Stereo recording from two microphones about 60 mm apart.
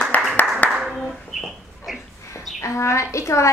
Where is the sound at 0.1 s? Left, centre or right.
Left.